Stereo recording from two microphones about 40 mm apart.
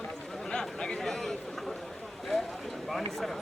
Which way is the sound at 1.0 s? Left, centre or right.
Centre.